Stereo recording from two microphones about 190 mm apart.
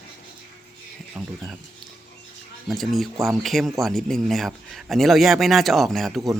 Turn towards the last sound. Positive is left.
turn(degrees=0)  # may be behind; listen again after turning